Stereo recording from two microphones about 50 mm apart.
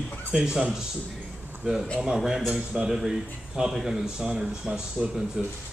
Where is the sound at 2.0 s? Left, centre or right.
Centre.